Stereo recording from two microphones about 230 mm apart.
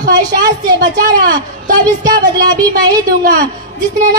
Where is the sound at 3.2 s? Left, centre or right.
Right.